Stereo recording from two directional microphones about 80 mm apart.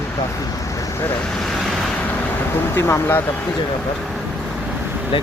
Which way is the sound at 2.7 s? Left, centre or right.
Left.